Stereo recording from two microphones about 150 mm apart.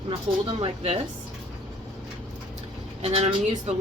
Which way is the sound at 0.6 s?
35° right (ahead or behind).